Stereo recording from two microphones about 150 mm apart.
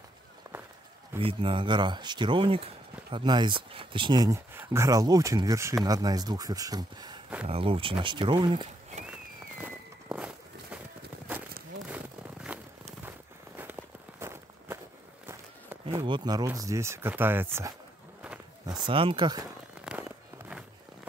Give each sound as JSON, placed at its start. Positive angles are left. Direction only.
{"t": 1.2, "sound": "speech", "side_deg": -35}
{"t": 7.4, "sound": "speech", "side_deg": -40}
{"t": 9.6, "sound": "walk", "side_deg": -10}
{"t": 12.5, "sound": "a sound", "side_deg": -5}
{"t": 13.6, "sound": "walk", "side_deg": -15}
{"t": 15.9, "sound": "speech", "side_deg": -25}
{"t": 18.7, "sound": "speech", "side_deg": -30}
{"t": 19.8, "sound": "a sound", "side_deg": -5}